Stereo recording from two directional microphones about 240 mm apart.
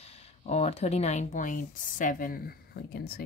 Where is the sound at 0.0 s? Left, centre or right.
Left.